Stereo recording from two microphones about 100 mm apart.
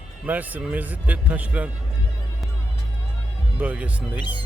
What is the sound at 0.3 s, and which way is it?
Speech, 15° right (ahead or behind).